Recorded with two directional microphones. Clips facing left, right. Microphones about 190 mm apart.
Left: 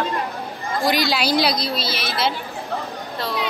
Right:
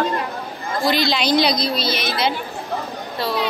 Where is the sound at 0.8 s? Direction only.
10° left (ahead or behind).